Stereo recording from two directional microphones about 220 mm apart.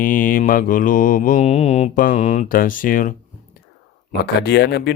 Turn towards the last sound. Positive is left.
turn(degrees=50)  # may be behind; listen again after turning